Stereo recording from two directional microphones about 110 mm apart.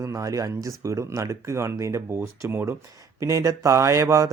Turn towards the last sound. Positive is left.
turn(degrees=-30)  # may be behind; listen again after turning